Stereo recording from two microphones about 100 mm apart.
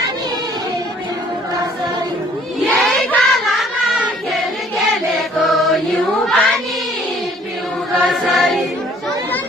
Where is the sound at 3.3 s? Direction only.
Centre (ahead or behind).